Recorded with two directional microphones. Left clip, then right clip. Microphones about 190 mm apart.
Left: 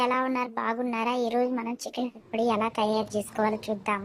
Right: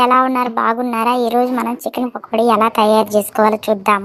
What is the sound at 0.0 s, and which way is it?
A woman's voice, 30° right (ahead or behind).